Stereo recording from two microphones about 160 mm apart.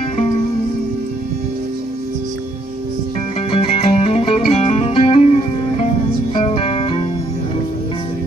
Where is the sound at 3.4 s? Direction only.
35° left (ahead or behind).